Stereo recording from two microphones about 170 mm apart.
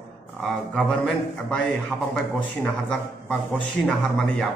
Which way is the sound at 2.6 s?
5° left (ahead or behind).